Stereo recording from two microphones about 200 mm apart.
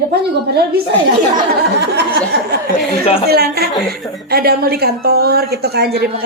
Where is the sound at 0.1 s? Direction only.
50° right (ahead or behind).